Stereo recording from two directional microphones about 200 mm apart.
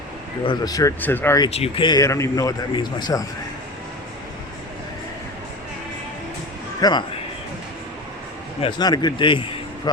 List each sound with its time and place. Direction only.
0.4 s speech: 20° left (ahead or behind)
1.5 s speech: 30° left (ahead or behind)
6.8 s speech: 20° left (ahead or behind)
8.6 s speech: 20° left (ahead or behind)